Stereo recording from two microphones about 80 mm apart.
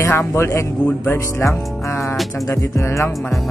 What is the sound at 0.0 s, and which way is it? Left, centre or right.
Speech, left.